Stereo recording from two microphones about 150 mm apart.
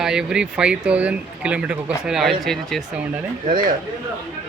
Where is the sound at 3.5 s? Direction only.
65° right (ahead or behind).